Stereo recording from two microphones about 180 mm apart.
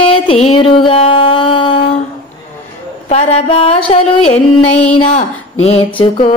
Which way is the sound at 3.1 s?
35° left (ahead or behind).